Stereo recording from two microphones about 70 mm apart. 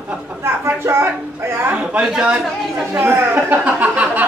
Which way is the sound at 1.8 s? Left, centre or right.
Centre.